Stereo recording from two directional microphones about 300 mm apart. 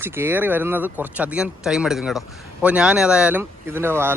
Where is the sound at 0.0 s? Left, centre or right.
Centre.